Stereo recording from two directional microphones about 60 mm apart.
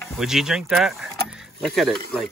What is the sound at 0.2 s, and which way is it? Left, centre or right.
Speech, centre.